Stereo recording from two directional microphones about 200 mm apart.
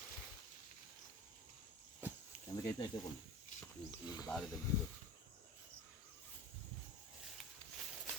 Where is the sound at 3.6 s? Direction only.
20° left (ahead or behind).